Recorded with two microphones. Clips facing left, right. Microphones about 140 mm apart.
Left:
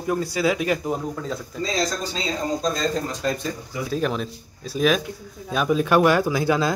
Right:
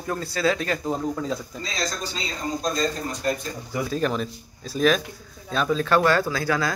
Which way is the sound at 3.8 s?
Centre (ahead or behind).